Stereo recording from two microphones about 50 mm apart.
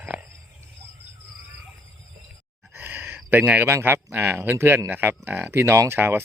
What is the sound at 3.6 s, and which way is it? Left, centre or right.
Speech, right.